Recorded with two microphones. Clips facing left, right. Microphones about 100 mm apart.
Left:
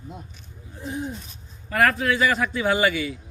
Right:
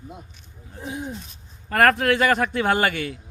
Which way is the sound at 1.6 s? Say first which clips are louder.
Right 3 dB; 55° right (ahead or behind).